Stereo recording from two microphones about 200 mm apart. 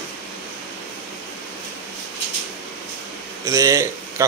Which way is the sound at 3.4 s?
15° right (ahead or behind).